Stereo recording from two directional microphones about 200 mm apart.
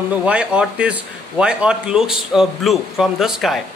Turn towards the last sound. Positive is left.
turn(degrees=0)  # may be behind; listen again after turning